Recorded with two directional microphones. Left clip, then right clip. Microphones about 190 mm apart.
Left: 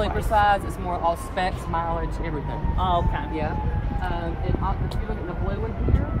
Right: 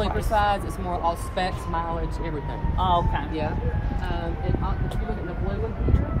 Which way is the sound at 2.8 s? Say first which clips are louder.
Right 1 dB; 15° right (ahead or behind).